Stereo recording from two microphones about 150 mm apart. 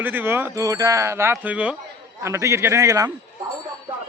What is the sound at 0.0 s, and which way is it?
A man's voice, 15° right (ahead or behind).